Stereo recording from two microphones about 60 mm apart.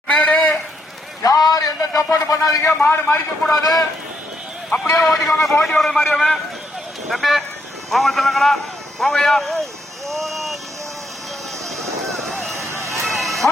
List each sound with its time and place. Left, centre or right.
0.1 s a sound: centre
1.2 s a sound: left
2.9 s a man's voice: left
3.4 s a man's voice: centre
4.9 s a man's voice: centre
10.1 s vehicle: centre
11.8 s run: centre
12.5 s vehicle: right
13.1 s music: centre